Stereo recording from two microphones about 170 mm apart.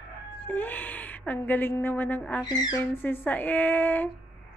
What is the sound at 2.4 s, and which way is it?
Female singing, 25° left (ahead or behind).